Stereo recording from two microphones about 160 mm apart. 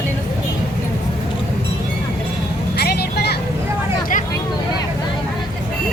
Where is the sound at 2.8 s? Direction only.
80° left.